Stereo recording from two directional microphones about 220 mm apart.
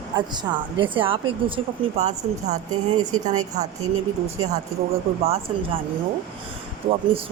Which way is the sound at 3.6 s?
30° right (ahead or behind).